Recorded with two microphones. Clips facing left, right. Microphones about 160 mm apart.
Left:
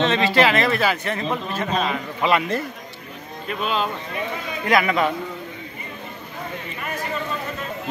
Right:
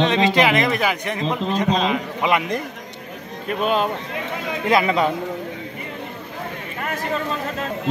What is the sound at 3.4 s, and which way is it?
Speech, 50° right (ahead or behind).